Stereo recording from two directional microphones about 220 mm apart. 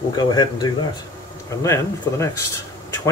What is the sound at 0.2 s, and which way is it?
Speech, 20° left (ahead or behind).